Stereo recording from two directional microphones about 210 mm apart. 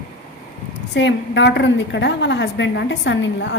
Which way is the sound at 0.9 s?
60° left (ahead or behind).